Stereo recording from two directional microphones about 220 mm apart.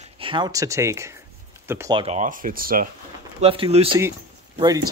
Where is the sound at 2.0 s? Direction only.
30° right (ahead or behind).